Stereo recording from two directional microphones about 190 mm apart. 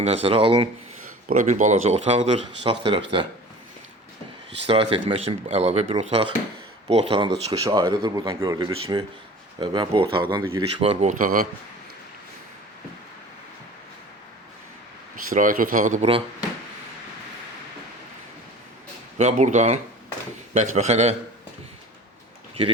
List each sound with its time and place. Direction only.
0.0 s speech: 30° right (ahead or behind)
1.3 s speech: 40° right (ahead or behind)
4.6 s speech: 30° right (ahead or behind)
15.1 s speech: 45° right (ahead or behind)
19.2 s speech: 40° right (ahead or behind)